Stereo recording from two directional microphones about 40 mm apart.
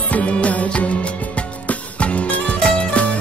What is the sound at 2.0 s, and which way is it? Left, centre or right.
Music, left.